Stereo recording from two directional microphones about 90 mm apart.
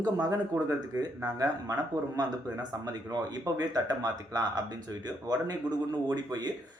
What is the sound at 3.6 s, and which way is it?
Speech, 50° right (ahead or behind).